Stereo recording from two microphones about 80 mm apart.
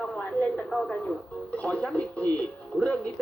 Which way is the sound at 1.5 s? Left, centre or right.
Centre.